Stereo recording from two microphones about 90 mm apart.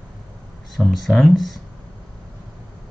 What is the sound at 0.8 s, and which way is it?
Speech, centre (ahead or behind).